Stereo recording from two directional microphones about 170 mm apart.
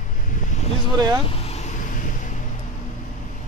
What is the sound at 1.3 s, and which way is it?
Vehicle, 35° left (ahead or behind).